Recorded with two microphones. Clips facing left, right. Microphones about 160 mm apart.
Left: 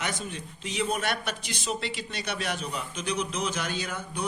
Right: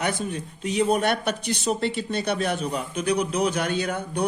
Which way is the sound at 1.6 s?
55° right (ahead or behind).